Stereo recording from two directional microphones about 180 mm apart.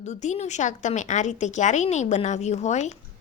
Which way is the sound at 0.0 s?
40° left (ahead or behind).